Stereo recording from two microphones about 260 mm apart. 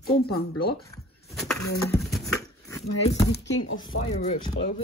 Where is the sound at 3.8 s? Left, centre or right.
Centre.